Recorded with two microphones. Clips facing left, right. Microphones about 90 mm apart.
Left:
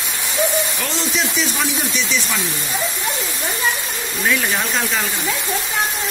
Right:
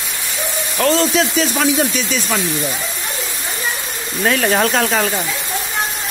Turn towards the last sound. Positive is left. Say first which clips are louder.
# right 6 dB
turn(degrees=-55)  # may be behind; listen again after turning